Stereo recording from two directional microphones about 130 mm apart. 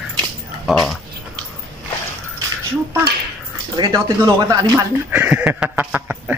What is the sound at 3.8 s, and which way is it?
Speech, 30° right (ahead or behind).